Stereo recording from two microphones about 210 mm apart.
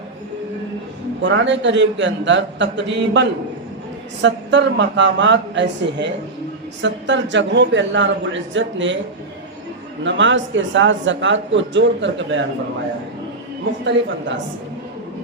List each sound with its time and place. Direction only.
1.2 s speech: 60° right (ahead or behind)
10.0 s speech: 60° right (ahead or behind)